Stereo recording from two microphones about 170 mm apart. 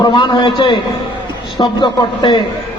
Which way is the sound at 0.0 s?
25° left (ahead or behind).